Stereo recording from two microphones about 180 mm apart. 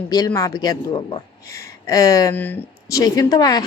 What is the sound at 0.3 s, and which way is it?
A woman's voice, 20° left (ahead or behind).